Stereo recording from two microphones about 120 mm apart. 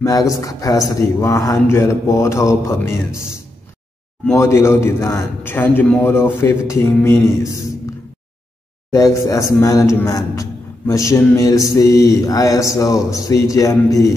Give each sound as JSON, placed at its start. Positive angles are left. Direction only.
{"t": 0.0, "sound": "a man's voice", "side_deg": 30}
{"t": 4.4, "sound": "a man's voice", "side_deg": 25}
{"t": 8.9, "sound": "a man's voice", "side_deg": 25}